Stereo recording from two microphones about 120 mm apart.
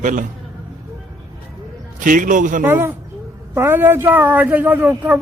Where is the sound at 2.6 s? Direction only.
15° right (ahead or behind).